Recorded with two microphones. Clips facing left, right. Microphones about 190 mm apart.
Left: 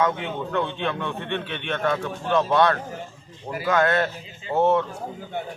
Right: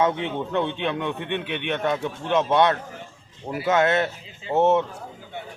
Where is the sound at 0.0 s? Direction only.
25° right (ahead or behind).